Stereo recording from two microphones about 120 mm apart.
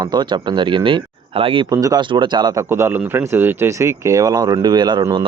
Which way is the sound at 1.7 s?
30° right (ahead or behind).